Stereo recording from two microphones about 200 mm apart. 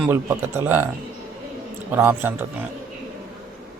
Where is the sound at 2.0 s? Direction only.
10° right (ahead or behind).